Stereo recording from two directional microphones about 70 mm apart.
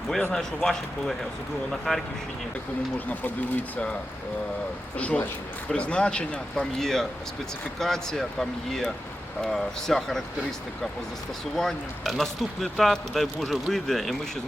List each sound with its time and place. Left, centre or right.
0.3 s speech: centre
3.1 s speech: left
4.9 s speech: centre
11.5 s speech: centre